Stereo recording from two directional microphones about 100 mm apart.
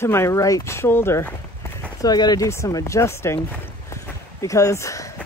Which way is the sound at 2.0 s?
40° left (ahead or behind).